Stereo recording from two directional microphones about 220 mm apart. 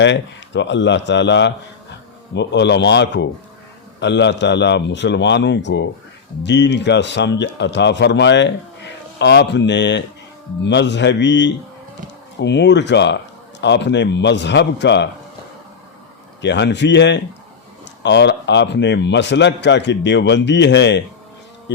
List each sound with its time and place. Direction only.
0.0 s a man's voice: 55° left (ahead or behind)
16.4 s a man's voice: 55° left (ahead or behind)